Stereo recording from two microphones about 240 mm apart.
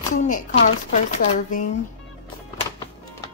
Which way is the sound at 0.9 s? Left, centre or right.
Left.